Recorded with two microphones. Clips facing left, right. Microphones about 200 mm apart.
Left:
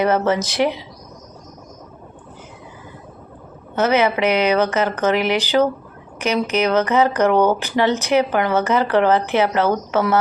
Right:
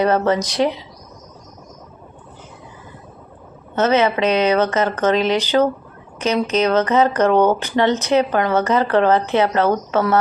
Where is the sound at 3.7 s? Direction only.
10° left (ahead or behind).